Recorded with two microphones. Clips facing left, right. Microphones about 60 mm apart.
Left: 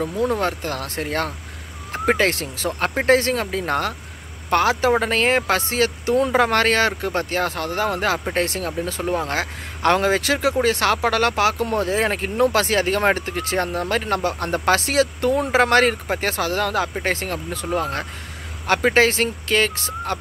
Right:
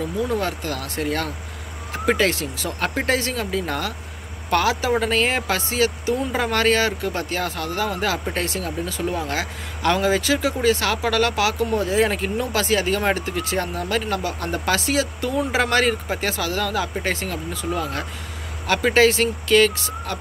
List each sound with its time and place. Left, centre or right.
0.0 s speech: left